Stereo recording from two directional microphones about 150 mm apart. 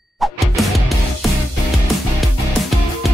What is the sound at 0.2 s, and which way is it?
Music, centre (ahead or behind).